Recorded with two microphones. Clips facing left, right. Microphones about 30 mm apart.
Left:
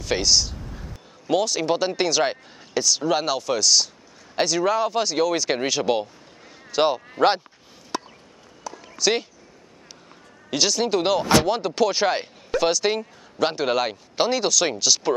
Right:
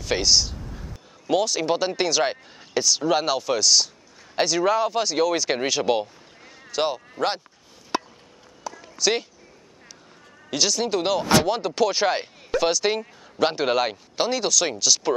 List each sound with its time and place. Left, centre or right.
0.0 s speech: centre
6.7 s speech: centre
7.9 s chop: right
8.7 s a sound: centre
10.5 s speech: centre
14.1 s speech: centre